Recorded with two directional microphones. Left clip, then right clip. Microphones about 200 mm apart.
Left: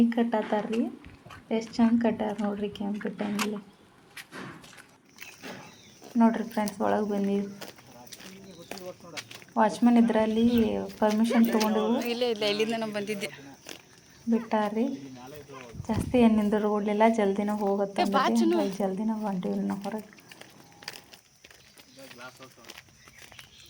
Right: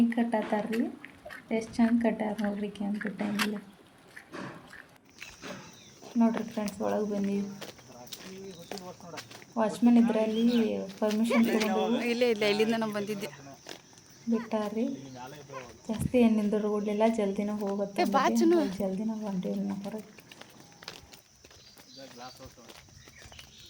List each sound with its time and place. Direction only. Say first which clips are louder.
0.1 s speech: left 2 dB; 5° left (ahead or behind)
6.1 s speech: left 4 dB; 10° left (ahead or behind)
7.2 s speech: left 4 dB; 50° left (ahead or behind)
8.7 s a sound: left 1 dB; 65° left (ahead or behind)
9.6 s speech: left 3 dB; 10° left (ahead or behind)
12.0 s speech: right 1 dB; 20° right (ahead or behind)
12.9 s a man's voice: left 2 dB; centre (ahead or behind)
15.9 s speech: left 2 dB; 10° left (ahead or behind)
17.9 s a woman's voice: right 2 dB; 10° right (ahead or behind)
18.8 s speech: left 4 dB; 10° left (ahead or behind)
20.3 s run: left 1 dB; 55° left (ahead or behind)